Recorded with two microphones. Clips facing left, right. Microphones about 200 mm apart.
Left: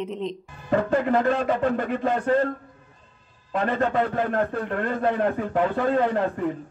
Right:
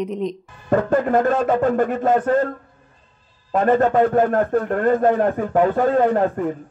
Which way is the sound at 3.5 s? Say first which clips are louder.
Right 7 dB; 45° right (ahead or behind).